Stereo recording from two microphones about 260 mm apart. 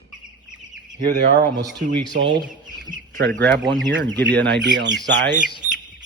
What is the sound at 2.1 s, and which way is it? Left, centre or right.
Speech, right.